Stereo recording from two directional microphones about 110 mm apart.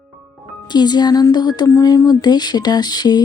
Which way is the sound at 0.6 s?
40° left (ahead or behind).